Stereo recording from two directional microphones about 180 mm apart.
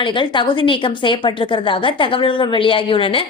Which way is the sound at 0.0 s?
25° left (ahead or behind).